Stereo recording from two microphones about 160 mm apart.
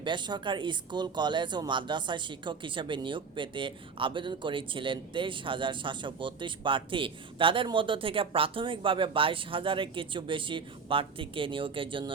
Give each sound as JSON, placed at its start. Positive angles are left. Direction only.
{"t": 0.0, "sound": "speech", "side_deg": -30}